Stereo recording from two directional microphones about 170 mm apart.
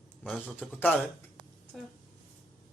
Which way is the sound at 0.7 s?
10° left (ahead or behind).